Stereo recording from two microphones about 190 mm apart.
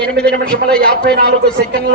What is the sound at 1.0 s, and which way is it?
Speech, 60° right (ahead or behind).